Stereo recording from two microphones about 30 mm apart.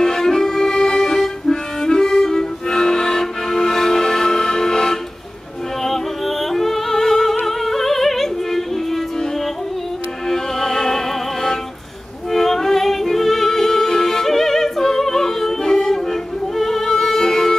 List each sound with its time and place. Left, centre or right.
0.0 s accordion: centre
1.1 s music: centre
5.9 s music: centre
10.2 s music: centre
12.3 s music: centre